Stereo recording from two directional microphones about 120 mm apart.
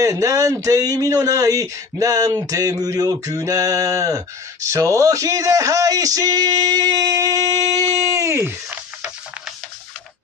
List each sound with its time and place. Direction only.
0.0 s speech: 30° right (ahead or behind)